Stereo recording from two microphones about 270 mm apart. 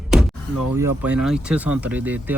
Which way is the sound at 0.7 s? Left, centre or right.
Centre.